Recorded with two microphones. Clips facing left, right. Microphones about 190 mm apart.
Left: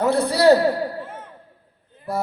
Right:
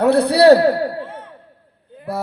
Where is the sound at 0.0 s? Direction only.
65° right (ahead or behind).